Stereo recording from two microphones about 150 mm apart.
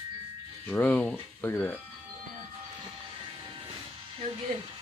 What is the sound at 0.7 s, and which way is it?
Speech, 10° left (ahead or behind).